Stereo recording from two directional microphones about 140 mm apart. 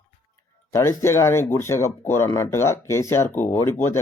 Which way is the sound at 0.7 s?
20° left (ahead or behind).